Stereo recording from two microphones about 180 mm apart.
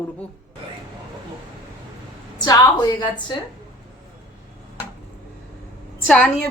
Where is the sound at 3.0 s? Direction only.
25° left (ahead or behind).